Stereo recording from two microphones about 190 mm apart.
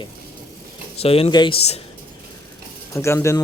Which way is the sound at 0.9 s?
30° left (ahead or behind).